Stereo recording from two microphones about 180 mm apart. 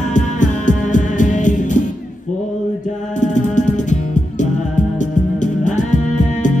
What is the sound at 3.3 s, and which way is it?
Music, 45° left (ahead or behind).